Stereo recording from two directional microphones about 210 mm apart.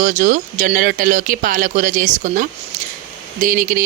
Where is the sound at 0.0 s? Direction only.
35° right (ahead or behind).